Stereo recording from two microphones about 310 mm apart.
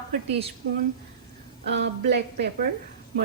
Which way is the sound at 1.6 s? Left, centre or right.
Right.